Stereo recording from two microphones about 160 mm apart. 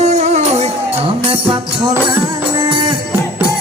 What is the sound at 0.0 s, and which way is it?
Music, 45° right (ahead or behind).